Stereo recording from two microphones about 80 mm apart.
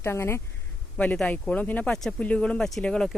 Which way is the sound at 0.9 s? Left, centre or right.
Centre.